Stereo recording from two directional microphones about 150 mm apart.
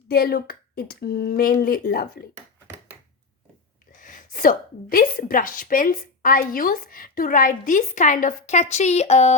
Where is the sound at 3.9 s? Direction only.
60° left (ahead or behind).